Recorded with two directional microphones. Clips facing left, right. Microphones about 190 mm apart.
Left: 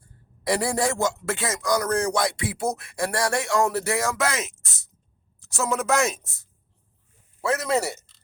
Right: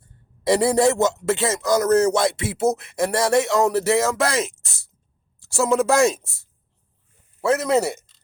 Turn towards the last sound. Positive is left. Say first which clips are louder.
# right 5 dB
turn(degrees=-20)  # may be behind; listen again after turning